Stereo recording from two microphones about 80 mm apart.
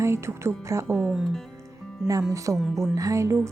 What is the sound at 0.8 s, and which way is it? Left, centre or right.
Speech, centre.